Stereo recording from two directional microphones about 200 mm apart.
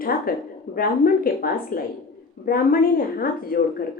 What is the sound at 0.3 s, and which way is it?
A woman's voice, 45° left (ahead or behind).